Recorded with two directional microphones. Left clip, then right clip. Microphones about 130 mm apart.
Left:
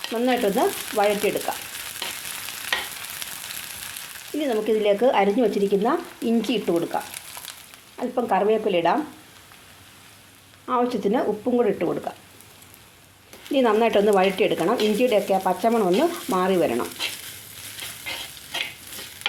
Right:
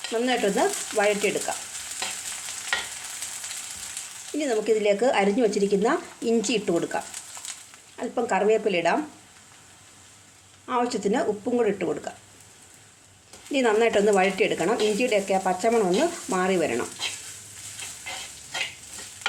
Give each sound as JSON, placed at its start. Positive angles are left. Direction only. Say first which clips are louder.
{"t": 0.1, "sound": "speech", "louder": "left 2 dB", "side_deg": 25}
{"t": 4.4, "sound": "speech", "louder": "left 1 dB", "side_deg": 20}
{"t": 7.9, "sound": "speech", "louder": "left 3 dB", "side_deg": 20}
{"t": 10.7, "sound": "speech", "louder": "left 3 dB", "side_deg": 30}
{"t": 13.5, "sound": "speech", "louder": "left 2 dB", "side_deg": 25}